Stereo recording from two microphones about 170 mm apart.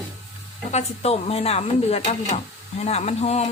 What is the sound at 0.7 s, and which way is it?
Speech, 35° left (ahead or behind).